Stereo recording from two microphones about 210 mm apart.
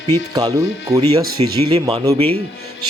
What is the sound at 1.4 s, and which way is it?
Music, 25° right (ahead or behind).